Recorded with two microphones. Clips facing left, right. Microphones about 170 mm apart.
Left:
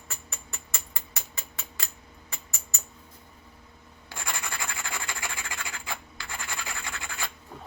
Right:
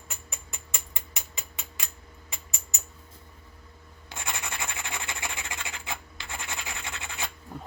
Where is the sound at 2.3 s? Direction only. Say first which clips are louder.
Even; 20° right (ahead or behind).